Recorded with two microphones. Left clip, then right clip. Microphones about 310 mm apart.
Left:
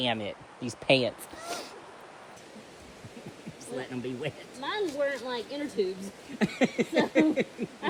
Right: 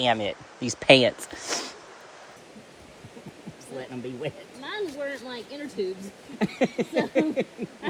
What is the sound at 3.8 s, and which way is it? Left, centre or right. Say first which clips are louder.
Speech: right 2 dB; centre.